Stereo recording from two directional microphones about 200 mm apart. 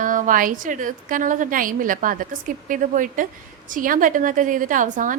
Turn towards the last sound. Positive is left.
turn(degrees=-40)  # may be behind; listen again after turning